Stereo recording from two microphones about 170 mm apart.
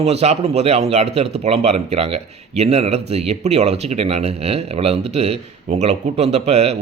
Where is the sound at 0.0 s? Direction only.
40° right (ahead or behind).